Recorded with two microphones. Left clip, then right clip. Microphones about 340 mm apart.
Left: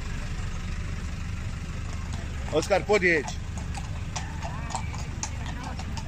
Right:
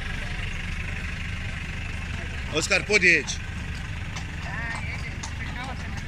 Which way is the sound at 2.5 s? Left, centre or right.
Left.